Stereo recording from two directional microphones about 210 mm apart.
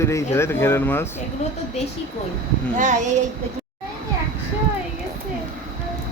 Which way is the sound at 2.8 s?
35° right (ahead or behind).